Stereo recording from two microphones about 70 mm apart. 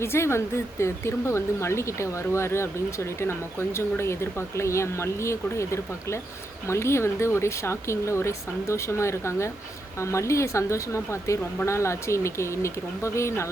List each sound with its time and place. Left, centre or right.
0.0 s speech: left